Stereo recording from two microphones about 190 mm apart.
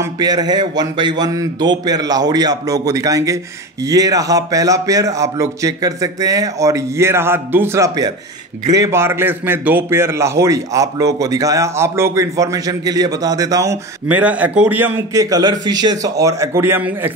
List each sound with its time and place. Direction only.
0.0 s a man's voice: 20° right (ahead or behind)